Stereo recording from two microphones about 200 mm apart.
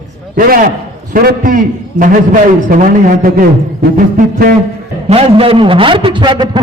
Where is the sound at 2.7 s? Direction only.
45° right (ahead or behind).